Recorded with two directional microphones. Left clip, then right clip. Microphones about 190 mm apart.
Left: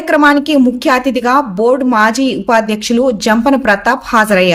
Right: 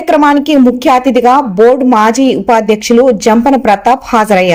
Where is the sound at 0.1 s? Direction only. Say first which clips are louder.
Right 2 dB; 10° right (ahead or behind).